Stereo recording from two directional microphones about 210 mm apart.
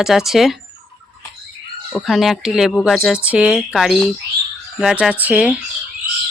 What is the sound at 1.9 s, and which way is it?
Speech, centre (ahead or behind).